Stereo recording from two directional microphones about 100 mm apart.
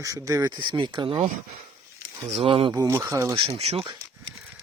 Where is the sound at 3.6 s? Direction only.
90° right.